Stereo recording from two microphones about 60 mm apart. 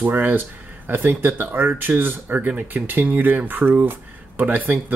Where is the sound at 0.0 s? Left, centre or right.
Right.